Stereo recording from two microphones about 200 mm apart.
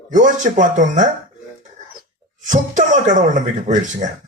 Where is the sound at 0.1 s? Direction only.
40° right (ahead or behind).